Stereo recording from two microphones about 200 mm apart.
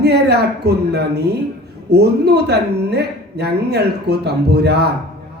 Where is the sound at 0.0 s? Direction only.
55° right (ahead or behind).